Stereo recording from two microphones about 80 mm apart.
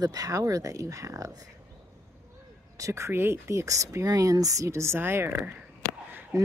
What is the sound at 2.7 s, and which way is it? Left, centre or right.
Speech, right.